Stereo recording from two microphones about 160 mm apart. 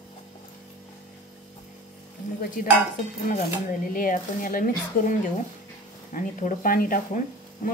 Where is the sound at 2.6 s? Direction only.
60° left (ahead or behind).